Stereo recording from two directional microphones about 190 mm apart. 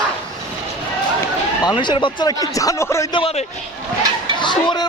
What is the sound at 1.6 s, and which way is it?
Speech, 20° left (ahead or behind).